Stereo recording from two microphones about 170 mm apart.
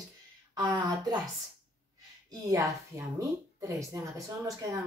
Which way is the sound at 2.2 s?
20° right (ahead or behind).